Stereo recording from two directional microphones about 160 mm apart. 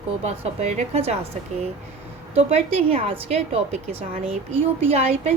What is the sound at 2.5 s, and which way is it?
A woman's voice, 35° right (ahead or behind).